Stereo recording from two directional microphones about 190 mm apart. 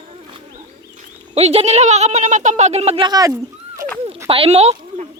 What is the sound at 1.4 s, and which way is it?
Speech, 35° right (ahead or behind).